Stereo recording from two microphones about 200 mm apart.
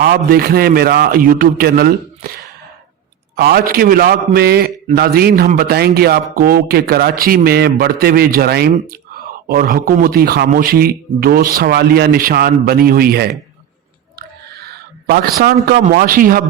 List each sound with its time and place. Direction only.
0.0 s speech: 50° right (ahead or behind)
3.3 s speech: 50° right (ahead or behind)
14.2 s a sound: 55° right (ahead or behind)